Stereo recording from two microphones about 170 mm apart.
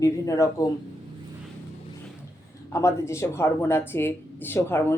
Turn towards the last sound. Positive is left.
turn(degrees=15)  # may be behind; listen again after turning